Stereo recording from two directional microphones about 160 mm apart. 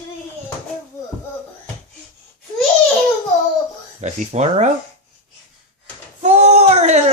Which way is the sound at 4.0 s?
45° right (ahead or behind).